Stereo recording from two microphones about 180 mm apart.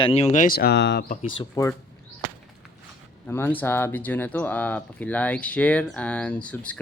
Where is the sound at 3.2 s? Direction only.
10° left (ahead or behind).